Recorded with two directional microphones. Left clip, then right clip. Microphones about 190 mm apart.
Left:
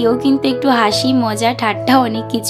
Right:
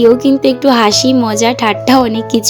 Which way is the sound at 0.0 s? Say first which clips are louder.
Right 6 dB; 15° right (ahead or behind).